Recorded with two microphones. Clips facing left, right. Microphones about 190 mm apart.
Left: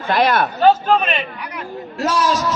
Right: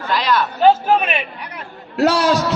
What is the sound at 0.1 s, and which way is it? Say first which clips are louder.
Speech: left 3 dB; 55° left (ahead or behind).